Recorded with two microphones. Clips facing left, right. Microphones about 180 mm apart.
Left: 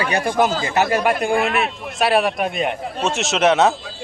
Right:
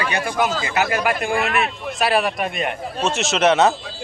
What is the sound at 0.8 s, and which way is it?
A man's voice, centre (ahead or behind).